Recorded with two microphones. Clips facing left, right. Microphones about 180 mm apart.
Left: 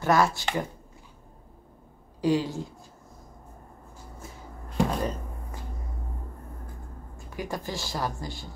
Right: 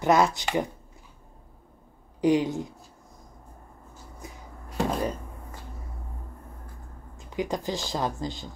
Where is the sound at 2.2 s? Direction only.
20° right (ahead or behind).